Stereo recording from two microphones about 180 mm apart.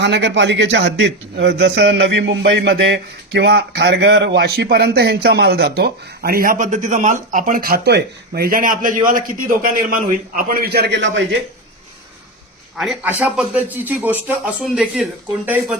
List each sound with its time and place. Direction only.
0.0 s a man's voice: 75° right (ahead or behind)
12.7 s a man's voice: 5° right (ahead or behind)